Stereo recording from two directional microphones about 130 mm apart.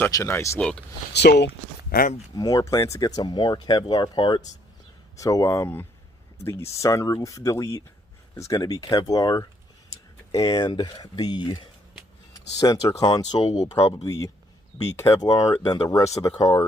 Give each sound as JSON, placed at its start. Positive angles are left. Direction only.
{"t": 0.1, "sound": "speech", "side_deg": 20}
{"t": 0.6, "sound": "speech", "side_deg": 5}
{"t": 2.3, "sound": "speech", "side_deg": 30}